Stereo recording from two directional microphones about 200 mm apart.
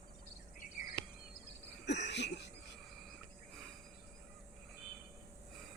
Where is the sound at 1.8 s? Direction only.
60° left (ahead or behind).